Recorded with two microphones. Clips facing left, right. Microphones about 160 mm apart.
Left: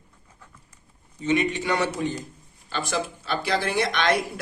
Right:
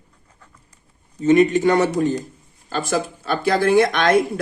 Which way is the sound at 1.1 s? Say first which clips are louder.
Right 9 dB; 45° right (ahead or behind).